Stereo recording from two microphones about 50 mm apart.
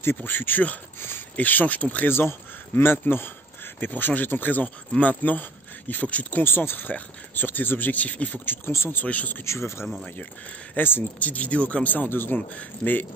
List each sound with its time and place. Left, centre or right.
0.0 s speech: left
2.0 s speech: left
3.8 s speech: left
6.4 s speech: left
7.9 s speech: left
8.6 s speech: left
9.0 s speech: left
9.4 s speech: left
10.8 s speech: left
11.1 s speech: left